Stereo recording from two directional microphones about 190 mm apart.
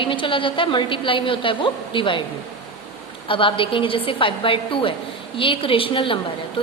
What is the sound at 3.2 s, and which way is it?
A woman's voice, 25° left (ahead or behind).